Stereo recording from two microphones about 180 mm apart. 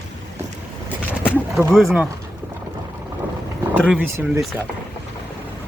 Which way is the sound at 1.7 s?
Centre (ahead or behind).